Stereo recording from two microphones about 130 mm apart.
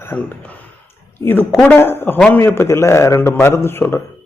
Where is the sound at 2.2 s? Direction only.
10° left (ahead or behind).